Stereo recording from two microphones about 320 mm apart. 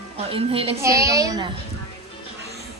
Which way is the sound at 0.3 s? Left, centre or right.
Centre.